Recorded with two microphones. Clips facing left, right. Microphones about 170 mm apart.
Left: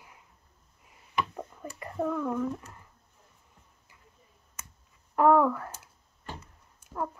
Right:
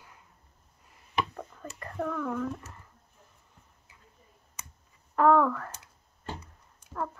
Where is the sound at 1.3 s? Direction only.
10° left (ahead or behind).